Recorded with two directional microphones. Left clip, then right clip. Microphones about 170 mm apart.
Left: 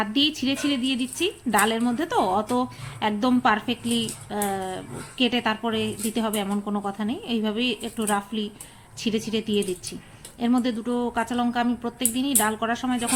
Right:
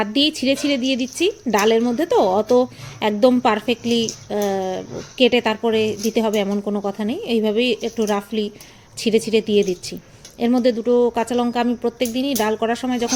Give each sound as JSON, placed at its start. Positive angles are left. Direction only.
{"t": 0.0, "sound": "speech", "side_deg": -15}